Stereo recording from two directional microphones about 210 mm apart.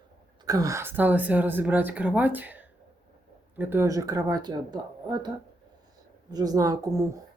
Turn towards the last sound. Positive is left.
turn(degrees=-15)  # may be behind; listen again after turning